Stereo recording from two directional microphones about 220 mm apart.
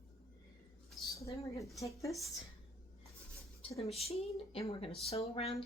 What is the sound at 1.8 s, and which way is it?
Speech, 15° left (ahead or behind).